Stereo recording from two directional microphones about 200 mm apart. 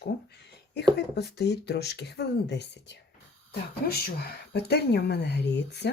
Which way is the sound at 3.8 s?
45° left (ahead or behind).